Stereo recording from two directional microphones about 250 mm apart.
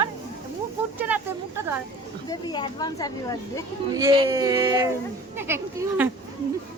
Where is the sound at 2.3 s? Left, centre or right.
Centre.